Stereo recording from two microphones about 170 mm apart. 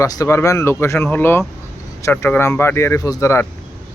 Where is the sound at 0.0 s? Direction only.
15° left (ahead or behind).